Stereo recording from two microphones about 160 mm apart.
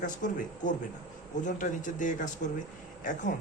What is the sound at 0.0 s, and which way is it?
A man's voice, 55° left (ahead or behind).